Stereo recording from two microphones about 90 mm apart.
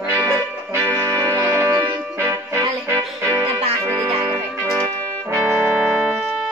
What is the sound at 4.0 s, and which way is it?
Music, 80° right.